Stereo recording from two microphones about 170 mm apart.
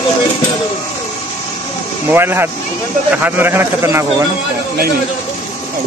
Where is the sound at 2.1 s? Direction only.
15° right (ahead or behind).